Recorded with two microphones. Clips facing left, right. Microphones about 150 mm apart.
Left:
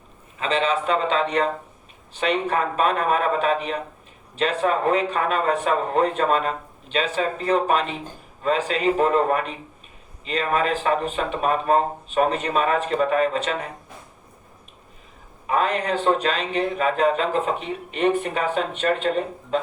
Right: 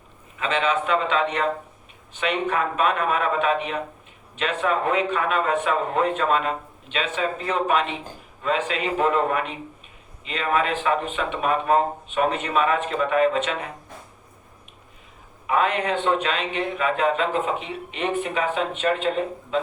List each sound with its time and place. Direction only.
0.3 s speech: 30° left (ahead or behind)
15.4 s speech: 35° left (ahead or behind)